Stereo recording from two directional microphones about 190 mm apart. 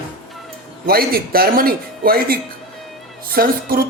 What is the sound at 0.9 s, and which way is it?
Speech, 50° right (ahead or behind).